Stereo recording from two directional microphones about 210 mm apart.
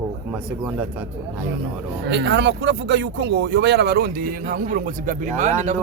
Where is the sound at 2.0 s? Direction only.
55° right (ahead or behind).